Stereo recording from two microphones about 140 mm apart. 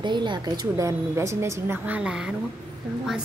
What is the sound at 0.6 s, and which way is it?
A woman's voice, 20° right (ahead or behind).